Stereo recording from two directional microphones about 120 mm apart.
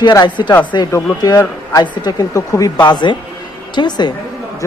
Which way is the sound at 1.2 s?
25° left (ahead or behind).